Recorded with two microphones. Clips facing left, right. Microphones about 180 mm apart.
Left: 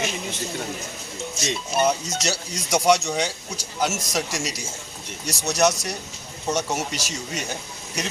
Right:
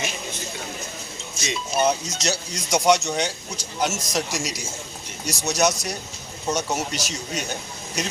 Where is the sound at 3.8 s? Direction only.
Centre (ahead or behind).